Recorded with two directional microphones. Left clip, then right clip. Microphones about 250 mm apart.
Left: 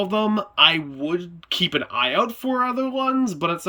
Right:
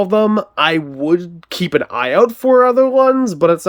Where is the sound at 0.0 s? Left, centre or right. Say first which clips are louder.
Right 9 dB; centre.